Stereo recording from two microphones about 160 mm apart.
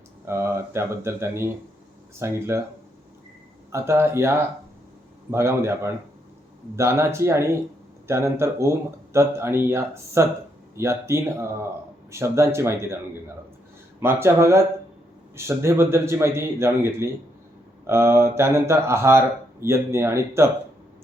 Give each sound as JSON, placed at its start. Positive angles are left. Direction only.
{"t": 0.3, "sound": "speech", "side_deg": -15}
{"t": 3.7, "sound": "speech", "side_deg": -15}
{"t": 14.0, "sound": "speech", "side_deg": -15}